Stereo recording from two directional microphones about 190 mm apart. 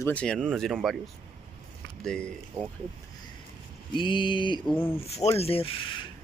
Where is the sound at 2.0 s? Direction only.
5° left (ahead or behind).